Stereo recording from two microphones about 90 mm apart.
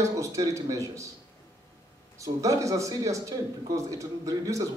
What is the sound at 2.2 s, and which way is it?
Speech, 35° right (ahead or behind).